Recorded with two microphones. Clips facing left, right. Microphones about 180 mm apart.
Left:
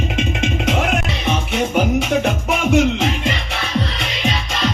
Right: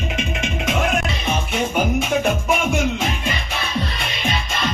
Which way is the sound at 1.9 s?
70° left (ahead or behind).